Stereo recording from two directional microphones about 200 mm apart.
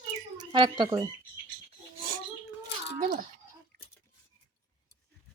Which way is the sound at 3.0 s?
45° right (ahead or behind).